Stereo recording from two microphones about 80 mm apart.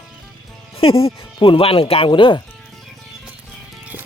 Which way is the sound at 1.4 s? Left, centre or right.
Left.